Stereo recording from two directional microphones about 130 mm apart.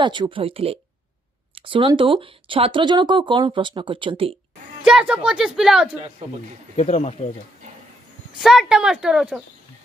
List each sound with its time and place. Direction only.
0.0 s speech: 35° right (ahead or behind)
4.8 s speech: 5° right (ahead or behind)
5.9 s speech: 50° right (ahead or behind)
6.8 s speech: 55° left (ahead or behind)
8.4 s speech: 5° right (ahead or behind)